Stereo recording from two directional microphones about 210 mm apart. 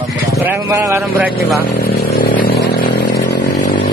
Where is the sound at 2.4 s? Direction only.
50° left (ahead or behind).